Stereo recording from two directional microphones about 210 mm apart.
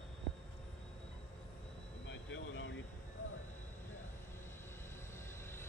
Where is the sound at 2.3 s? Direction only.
65° left (ahead or behind).